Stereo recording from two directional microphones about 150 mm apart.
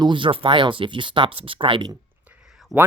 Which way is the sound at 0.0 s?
35° right (ahead or behind).